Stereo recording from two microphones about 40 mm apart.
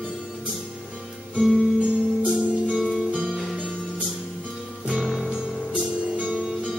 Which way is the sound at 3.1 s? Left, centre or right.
Centre.